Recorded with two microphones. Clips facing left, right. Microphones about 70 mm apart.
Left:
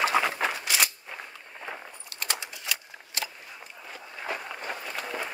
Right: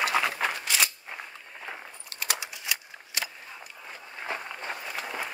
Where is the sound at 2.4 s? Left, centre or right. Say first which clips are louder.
Even; right.